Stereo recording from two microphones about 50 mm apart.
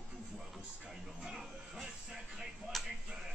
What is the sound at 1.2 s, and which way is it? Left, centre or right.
Music, centre.